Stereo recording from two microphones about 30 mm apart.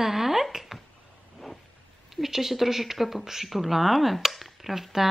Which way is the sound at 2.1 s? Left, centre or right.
Centre.